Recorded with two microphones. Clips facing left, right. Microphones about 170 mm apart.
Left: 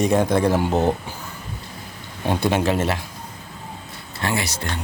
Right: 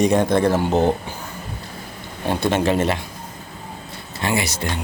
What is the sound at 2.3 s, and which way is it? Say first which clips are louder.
Speech: even; 10° left (ahead or behind).